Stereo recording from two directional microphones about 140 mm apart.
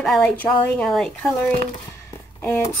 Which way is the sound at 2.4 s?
20° left (ahead or behind).